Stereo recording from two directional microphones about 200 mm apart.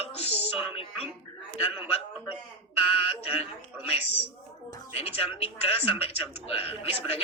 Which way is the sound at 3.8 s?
30° left (ahead or behind).